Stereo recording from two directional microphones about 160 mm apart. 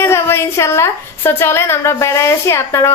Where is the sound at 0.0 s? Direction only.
15° left (ahead or behind).